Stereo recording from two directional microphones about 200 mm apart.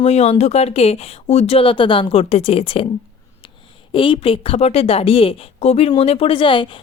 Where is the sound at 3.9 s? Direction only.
25° left (ahead or behind).